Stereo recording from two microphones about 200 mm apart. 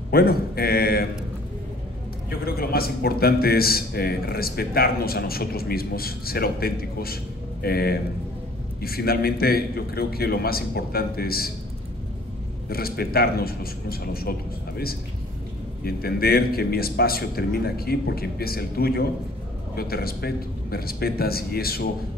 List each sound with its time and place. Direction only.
0.1 s a man's voice: 50° left (ahead or behind)
2.4 s a man's voice: 50° left (ahead or behind)
12.6 s a man's voice: 50° left (ahead or behind)
15.8 s a man's voice: 50° left (ahead or behind)